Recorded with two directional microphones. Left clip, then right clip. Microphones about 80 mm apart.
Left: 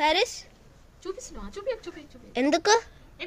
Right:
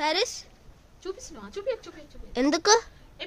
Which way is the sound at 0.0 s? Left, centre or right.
Centre.